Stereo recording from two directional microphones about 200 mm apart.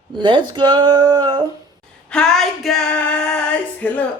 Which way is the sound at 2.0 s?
5° left (ahead or behind).